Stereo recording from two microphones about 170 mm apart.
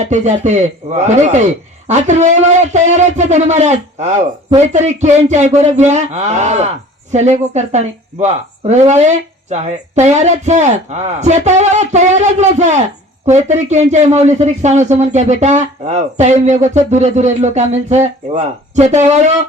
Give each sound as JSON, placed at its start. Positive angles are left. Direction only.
{"t": 0.0, "sound": "speech", "side_deg": -45}